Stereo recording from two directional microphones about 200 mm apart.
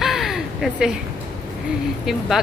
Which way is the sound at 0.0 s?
Centre (ahead or behind).